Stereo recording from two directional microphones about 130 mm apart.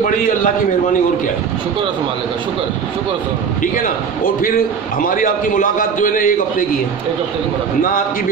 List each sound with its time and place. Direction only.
3.7 s a man's voice: 90° left